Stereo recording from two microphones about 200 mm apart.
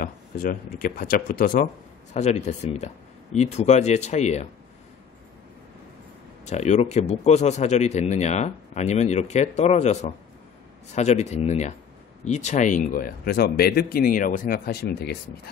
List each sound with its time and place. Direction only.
0.0 s speech: 45° left (ahead or behind)
6.4 s speech: 35° left (ahead or behind); by 15.1 s 55° left (ahead or behind)